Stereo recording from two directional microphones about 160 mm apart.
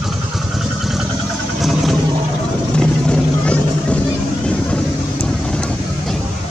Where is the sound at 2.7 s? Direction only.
5° left (ahead or behind).